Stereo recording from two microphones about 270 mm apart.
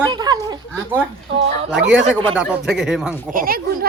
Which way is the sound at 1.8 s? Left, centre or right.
Right.